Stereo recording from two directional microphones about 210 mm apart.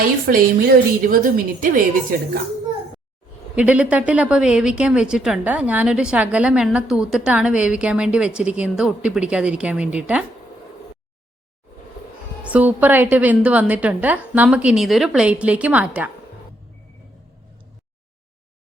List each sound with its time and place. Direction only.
0.0 s a woman's voice: 45° right (ahead or behind)
3.5 s speech: 5° right (ahead or behind)
12.5 s a woman's voice: 5° right (ahead or behind)